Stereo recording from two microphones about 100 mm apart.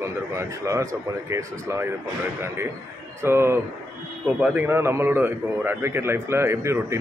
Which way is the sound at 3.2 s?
25° right (ahead or behind).